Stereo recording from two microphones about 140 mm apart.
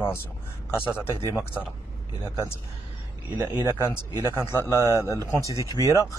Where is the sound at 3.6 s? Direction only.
20° left (ahead or behind).